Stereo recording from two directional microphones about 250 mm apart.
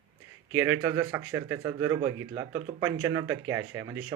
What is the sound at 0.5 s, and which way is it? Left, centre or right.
Speech, centre.